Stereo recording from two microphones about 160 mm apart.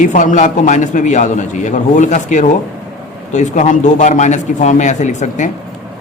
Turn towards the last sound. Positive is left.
turn(degrees=50)  # may be behind; listen again after turning